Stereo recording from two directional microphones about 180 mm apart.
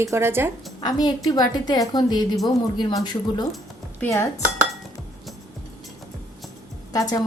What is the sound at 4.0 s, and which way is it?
Dishes, 15° left (ahead or behind).